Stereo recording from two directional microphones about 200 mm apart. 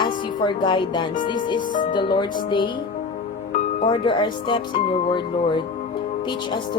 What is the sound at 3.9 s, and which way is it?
Music, 25° left (ahead or behind).